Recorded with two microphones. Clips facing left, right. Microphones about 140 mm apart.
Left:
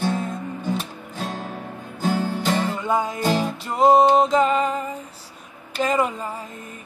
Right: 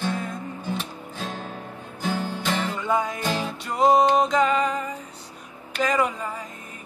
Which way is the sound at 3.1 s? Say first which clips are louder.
Left 5 dB; 40° left (ahead or behind).